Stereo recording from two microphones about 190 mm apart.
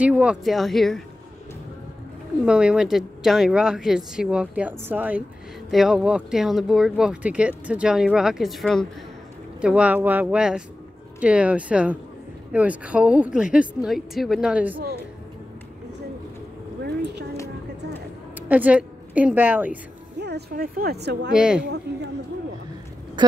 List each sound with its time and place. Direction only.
0.0 s speech: 5° right (ahead or behind)
2.4 s speech: 5° right (ahead or behind)
18.5 s a woman's voice: 10° right (ahead or behind)
20.2 s a woman's voice: 60° right (ahead or behind)
21.3 s speech: 5° right (ahead or behind)
21.9 s a woman's voice: 60° right (ahead or behind)
23.2 s speech: 25° right (ahead or behind)